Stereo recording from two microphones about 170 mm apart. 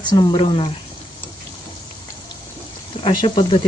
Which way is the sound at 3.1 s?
30° left (ahead or behind).